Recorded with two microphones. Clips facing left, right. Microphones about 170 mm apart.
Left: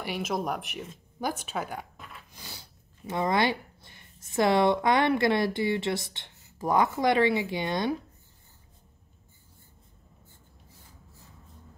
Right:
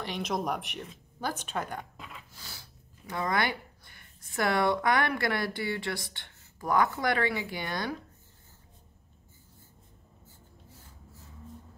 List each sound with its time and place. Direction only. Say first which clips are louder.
0.0 s speech: left 1 dB; 5° left (ahead or behind)
2.3 s speech: left 3 dB; 20° left (ahead or behind)